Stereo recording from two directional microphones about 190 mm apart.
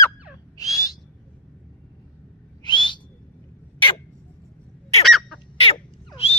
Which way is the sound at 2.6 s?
25° left (ahead or behind).